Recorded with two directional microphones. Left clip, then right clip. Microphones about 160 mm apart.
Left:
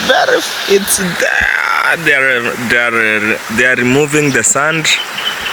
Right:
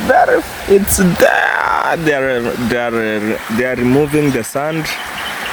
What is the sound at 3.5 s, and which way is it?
Speech, 10° right (ahead or behind).